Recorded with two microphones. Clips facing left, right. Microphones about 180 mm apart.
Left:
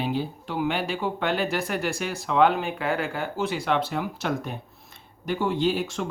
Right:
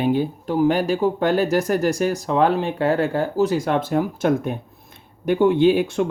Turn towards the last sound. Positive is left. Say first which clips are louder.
# right 8 dB
turn(degrees=-55)  # may be behind; listen again after turning